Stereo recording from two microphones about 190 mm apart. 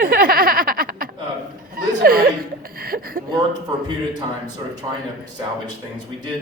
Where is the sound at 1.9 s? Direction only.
50° right (ahead or behind).